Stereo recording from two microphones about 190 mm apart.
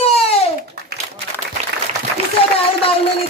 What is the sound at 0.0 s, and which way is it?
Babbling, 30° left (ahead or behind).